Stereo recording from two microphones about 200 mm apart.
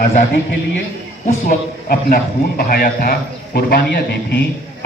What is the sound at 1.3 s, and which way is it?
A man's voice, 45° left (ahead or behind).